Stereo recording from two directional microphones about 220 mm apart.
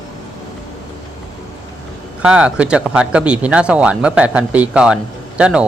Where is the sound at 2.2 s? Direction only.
5° right (ahead or behind).